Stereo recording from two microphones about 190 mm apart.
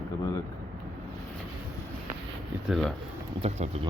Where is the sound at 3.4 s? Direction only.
35° right (ahead or behind).